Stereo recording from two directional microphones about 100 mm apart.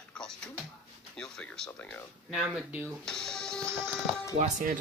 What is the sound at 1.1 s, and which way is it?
Speech, 5° left (ahead or behind).